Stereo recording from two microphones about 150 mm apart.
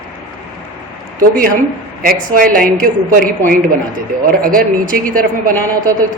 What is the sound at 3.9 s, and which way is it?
Speech, 70° right (ahead or behind).